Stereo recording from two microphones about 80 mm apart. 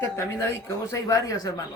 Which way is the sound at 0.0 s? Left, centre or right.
Left.